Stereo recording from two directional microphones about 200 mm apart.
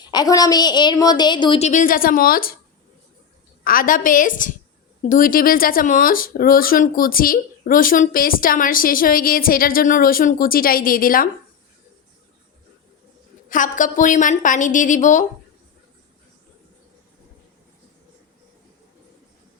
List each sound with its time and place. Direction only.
0.0 s a woman's voice: 20° left (ahead or behind); by 2.6 s 45° left (ahead or behind)
3.6 s speech: 45° left (ahead or behind)
13.5 s a woman's voice: 40° left (ahead or behind)